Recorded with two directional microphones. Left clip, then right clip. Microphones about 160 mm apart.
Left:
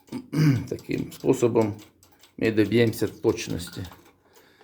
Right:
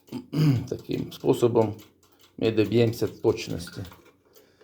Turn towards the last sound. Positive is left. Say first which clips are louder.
# left 1 dB
turn(degrees=10)  # may be behind; listen again after turning